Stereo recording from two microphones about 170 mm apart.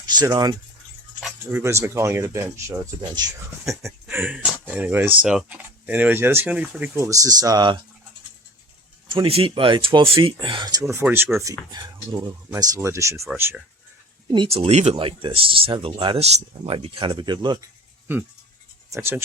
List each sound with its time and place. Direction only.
0.0 s speech: 25° right (ahead or behind)
9.0 s speech: 30° right (ahead or behind)
10.8 s speech: 10° right (ahead or behind)
11.7 s speech: 25° right (ahead or behind)
14.3 s speech: 30° right (ahead or behind)
18.9 s speech: 15° right (ahead or behind)